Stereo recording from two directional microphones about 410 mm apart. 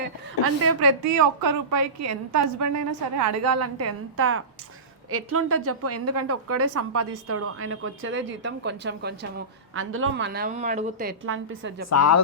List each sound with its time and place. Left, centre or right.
0.0 s a woman's voice: right
1.0 s a woman's voice: right
11.9 s speech: left